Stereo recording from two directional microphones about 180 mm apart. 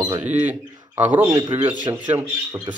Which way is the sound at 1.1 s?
25° right (ahead or behind).